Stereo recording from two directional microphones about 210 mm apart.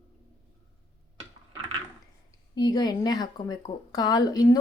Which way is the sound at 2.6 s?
20° left (ahead or behind).